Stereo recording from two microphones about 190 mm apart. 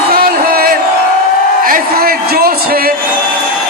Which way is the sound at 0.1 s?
50° right (ahead or behind).